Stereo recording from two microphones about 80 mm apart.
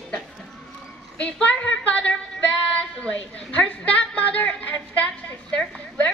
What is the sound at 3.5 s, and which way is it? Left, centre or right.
A woman's voice, centre.